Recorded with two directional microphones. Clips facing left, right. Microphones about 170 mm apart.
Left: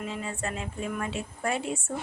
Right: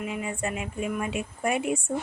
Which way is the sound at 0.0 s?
15° right (ahead or behind).